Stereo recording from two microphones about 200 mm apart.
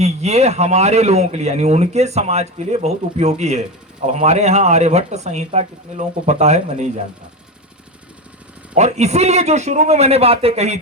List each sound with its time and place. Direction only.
0.0 s speech: 35° right (ahead or behind)
8.7 s speech: 35° right (ahead or behind)